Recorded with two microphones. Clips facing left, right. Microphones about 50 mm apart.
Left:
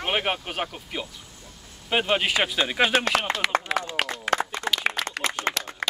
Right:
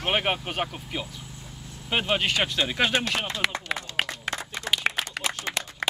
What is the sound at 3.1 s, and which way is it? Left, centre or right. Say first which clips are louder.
Speech: left 5 dB; left.